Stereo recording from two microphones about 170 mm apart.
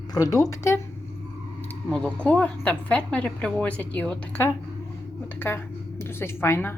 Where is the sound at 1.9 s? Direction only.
5° left (ahead or behind).